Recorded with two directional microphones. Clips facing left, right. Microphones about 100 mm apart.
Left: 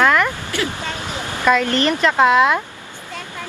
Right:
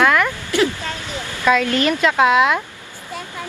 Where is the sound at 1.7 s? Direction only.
10° right (ahead or behind).